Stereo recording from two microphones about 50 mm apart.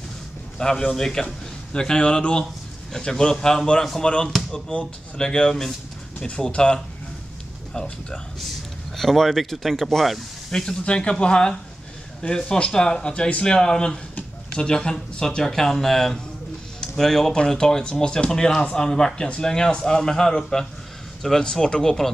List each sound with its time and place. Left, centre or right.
0.6 s speech: centre
6.1 s speech: left
8.9 s speech: centre
10.5 s speech: centre